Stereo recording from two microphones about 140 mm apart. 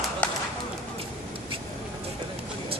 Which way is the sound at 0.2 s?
10° left (ahead or behind).